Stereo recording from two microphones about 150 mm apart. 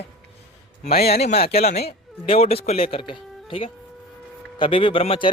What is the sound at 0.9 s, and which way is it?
Speech, 90° left.